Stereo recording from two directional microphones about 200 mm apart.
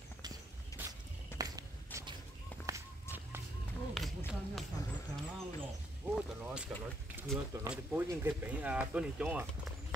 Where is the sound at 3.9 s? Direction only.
Centre (ahead or behind).